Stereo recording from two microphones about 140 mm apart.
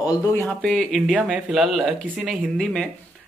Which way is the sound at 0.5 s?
5° left (ahead or behind).